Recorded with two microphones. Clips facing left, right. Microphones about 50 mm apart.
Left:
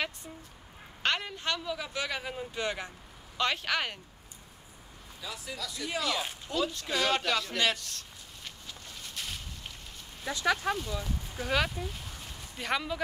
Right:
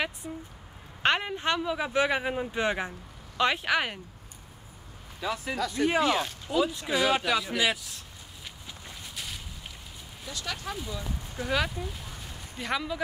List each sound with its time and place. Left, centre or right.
0.2 s speech: centre
1.0 s speech: right
5.3 s speech: right
6.4 s speech: centre
8.6 s a sound: centre
9.1 s a sound: centre
10.3 s speech: left
10.8 s speech: centre